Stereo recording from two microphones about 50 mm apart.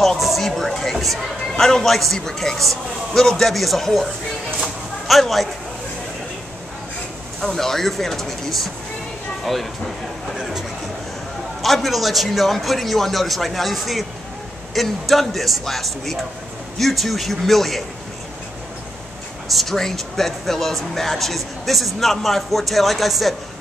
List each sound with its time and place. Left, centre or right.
0.0 s a sound: centre
1.5 s a man's voice: centre
7.3 s a man's voice: centre
11.6 s speech: centre
19.5 s speech: centre